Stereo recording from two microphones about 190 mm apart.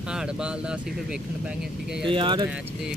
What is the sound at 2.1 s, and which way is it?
Speech, 25° right (ahead or behind).